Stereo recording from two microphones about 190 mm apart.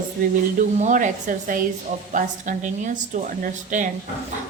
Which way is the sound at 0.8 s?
40° right (ahead or behind).